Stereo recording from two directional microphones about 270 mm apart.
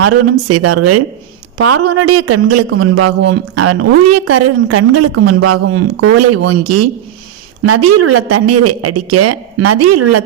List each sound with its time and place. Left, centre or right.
0.0 s speech: right